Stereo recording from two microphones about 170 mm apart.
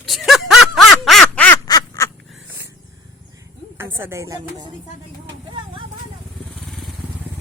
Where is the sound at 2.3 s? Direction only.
5° right (ahead or behind).